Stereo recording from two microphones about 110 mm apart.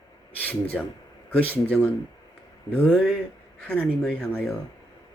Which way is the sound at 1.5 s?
15° left (ahead or behind).